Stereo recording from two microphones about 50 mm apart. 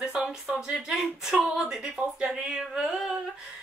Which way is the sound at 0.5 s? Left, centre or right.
Right.